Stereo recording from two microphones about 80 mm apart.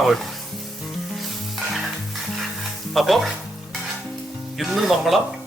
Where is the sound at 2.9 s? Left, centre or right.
Centre.